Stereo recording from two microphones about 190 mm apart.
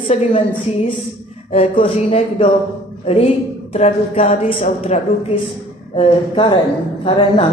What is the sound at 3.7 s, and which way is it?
A man's voice, 35° left (ahead or behind).